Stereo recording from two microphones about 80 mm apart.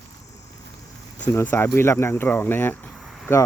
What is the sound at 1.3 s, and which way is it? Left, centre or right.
Speech, left.